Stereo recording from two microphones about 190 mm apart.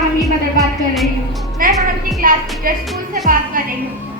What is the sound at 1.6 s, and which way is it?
Music, 45° right (ahead or behind).